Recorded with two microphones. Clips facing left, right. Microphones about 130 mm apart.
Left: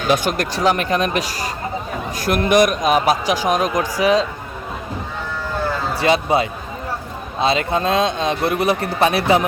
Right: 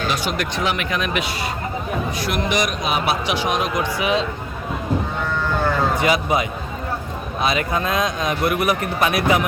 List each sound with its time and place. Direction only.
0.1 s speech: 45° left (ahead or behind)
5.9 s a man's voice: 30° left (ahead or behind)